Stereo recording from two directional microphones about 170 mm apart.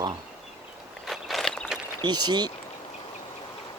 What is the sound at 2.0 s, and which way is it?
Speech, 25° right (ahead or behind).